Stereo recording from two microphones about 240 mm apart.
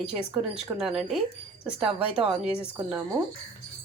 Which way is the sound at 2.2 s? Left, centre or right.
Right.